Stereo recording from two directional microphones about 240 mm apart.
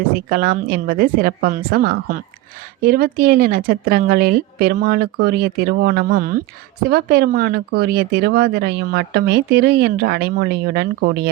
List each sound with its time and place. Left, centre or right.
0.3 s speech: right